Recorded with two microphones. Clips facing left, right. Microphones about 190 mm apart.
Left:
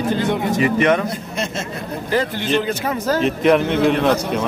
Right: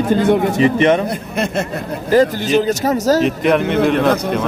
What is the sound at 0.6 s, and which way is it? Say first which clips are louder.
Speech: right 2 dB; 25° right (ahead or behind).